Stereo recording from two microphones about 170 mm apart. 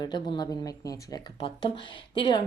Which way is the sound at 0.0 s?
25° left (ahead or behind).